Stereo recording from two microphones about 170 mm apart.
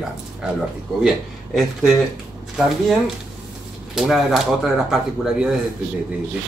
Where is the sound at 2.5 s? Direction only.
Centre (ahead or behind).